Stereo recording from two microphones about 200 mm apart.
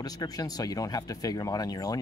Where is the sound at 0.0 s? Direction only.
20° left (ahead or behind).